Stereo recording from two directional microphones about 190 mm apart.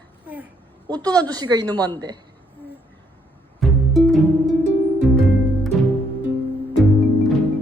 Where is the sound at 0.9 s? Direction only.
20° right (ahead or behind).